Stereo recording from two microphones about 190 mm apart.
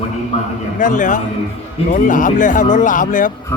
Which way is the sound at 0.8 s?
45° left (ahead or behind).